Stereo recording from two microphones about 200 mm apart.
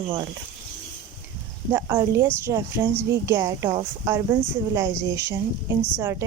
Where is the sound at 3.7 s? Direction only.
25° right (ahead or behind).